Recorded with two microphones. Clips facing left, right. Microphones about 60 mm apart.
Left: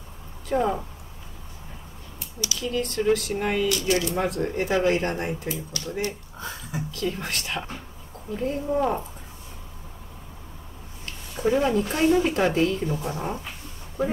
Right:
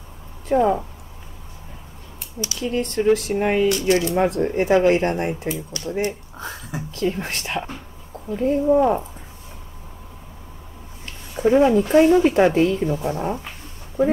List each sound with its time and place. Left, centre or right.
0.5 s speech: centre
2.4 s speech: right
8.7 s speech: centre
11.4 s speech: right